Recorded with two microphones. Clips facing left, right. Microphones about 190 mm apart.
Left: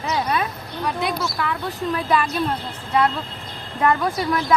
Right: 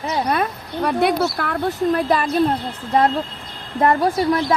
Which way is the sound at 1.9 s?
40° right (ahead or behind).